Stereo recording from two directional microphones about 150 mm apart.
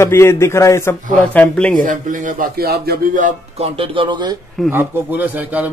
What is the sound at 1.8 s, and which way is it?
Speech, 60° right (ahead or behind).